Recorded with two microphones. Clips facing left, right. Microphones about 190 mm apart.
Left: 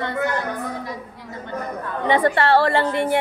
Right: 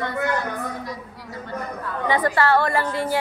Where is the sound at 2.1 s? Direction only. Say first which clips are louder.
Left 3 dB; 25° left (ahead or behind).